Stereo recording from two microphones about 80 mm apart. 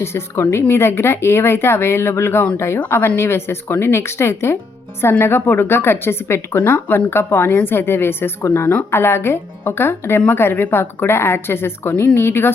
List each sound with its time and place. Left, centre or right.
0.0 s speech: left